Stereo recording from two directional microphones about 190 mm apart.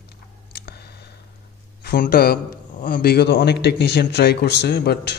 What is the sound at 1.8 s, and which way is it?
A man's voice, 50° left (ahead or behind).